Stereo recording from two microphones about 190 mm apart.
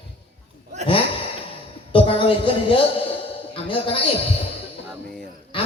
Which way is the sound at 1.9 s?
30° left (ahead or behind).